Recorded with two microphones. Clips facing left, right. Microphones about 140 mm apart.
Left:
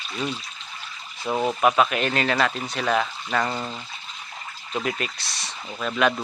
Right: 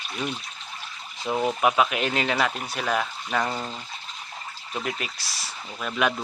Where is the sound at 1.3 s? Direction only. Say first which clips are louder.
Left 2 dB; 10° right (ahead or behind).